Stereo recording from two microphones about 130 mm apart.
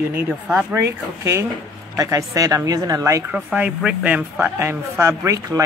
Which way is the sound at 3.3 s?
10° right (ahead or behind).